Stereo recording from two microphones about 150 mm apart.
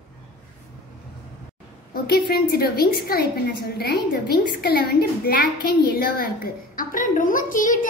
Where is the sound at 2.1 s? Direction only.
90° left.